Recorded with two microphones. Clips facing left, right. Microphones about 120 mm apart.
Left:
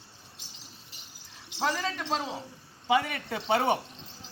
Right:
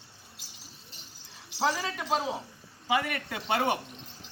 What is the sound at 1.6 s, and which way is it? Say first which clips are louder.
Speech: right 1 dB; 5° right (ahead or behind).